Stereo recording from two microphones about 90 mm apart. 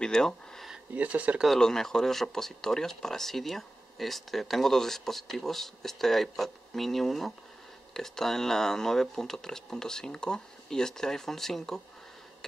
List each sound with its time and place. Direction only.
0.0 s a sound: 5° left (ahead or behind)
0.9 s speech: 15° right (ahead or behind)
1.4 s speech: 5° left (ahead or behind)